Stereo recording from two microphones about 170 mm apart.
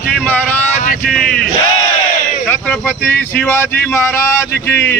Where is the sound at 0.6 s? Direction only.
45° left (ahead or behind).